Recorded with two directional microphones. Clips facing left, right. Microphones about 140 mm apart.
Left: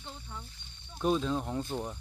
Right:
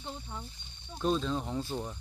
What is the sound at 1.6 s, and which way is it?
Speech, 15° left (ahead or behind).